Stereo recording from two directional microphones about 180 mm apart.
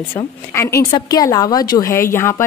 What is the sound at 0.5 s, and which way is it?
A woman's voice, 15° left (ahead or behind).